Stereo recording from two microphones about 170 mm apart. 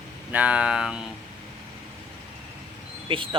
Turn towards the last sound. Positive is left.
turn(degrees=-30)  # may be behind; listen again after turning